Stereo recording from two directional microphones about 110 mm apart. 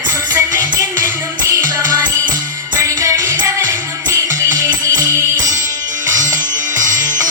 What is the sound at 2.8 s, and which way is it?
Music, 30° right (ahead or behind).